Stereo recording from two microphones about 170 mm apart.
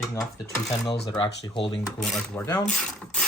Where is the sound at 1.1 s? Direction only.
25° left (ahead or behind).